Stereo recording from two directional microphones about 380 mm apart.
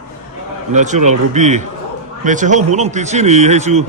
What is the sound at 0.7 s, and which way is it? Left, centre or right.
Speech, centre.